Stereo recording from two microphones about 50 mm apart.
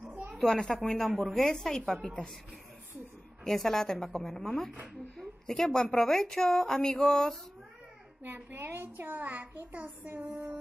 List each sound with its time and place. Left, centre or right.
0.4 s a woman's voice: centre
3.4 s a woman's voice: centre
8.2 s a child's voice: right
10.1 s music: right